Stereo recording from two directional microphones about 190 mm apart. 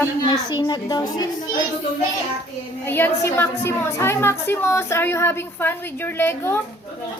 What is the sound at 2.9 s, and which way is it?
A woman's voice, 10° left (ahead or behind).